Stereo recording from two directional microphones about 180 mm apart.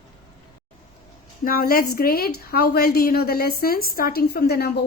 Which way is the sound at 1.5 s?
55° left (ahead or behind).